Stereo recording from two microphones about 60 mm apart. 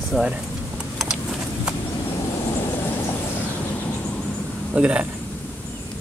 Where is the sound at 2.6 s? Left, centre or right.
Left.